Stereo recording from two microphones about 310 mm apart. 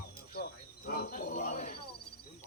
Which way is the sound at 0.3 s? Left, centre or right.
Left.